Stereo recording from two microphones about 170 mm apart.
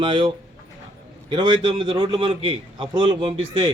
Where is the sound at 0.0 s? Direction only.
30° right (ahead or behind).